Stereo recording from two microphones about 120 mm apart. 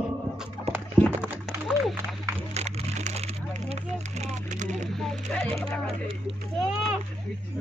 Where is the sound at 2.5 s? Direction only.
65° right (ahead or behind).